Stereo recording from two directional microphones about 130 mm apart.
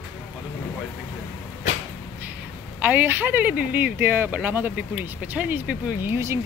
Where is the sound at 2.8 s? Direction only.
15° right (ahead or behind).